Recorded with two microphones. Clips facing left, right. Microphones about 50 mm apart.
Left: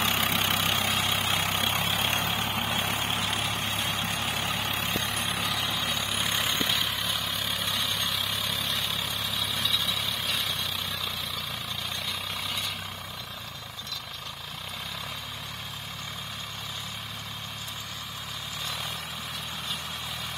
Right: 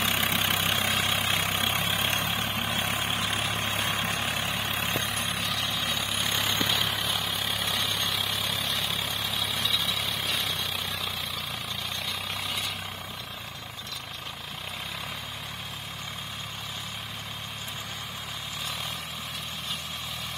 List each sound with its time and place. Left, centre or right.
0.1 s vehicle: centre
3.8 s vehicle: right
4.3 s vehicle: centre